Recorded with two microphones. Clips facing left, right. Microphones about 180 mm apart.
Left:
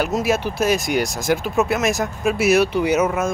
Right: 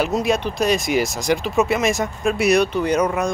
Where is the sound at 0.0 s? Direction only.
Centre (ahead or behind).